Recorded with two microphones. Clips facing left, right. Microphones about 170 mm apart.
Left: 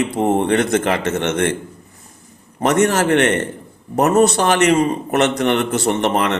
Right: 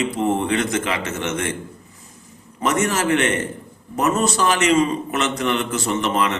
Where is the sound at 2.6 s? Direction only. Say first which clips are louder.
Left 5 dB; 65° left (ahead or behind).